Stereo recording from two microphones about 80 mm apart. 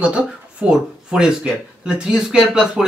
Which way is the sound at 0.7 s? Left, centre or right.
Centre.